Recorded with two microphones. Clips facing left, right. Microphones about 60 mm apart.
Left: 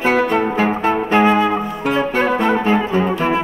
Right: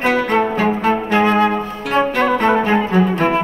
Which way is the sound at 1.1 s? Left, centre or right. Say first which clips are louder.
Left 1 dB; centre.